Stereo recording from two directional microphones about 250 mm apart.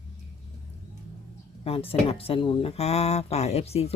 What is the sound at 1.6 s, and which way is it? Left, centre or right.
Speech, left.